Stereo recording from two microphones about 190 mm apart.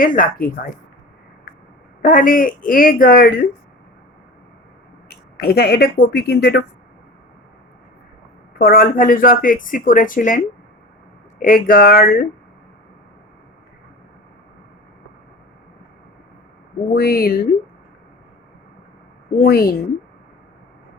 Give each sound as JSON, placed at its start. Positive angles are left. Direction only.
{"t": 0.0, "sound": "speech", "side_deg": 45}
{"t": 2.0, "sound": "speech", "side_deg": 45}
{"t": 5.0, "sound": "speech", "side_deg": 55}
{"t": 8.5, "sound": "speech", "side_deg": 50}
{"t": 16.9, "sound": "speech", "side_deg": 55}
{"t": 19.4, "sound": "speech", "side_deg": 55}